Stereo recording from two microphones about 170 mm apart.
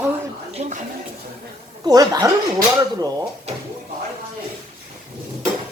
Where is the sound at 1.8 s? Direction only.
20° right (ahead or behind).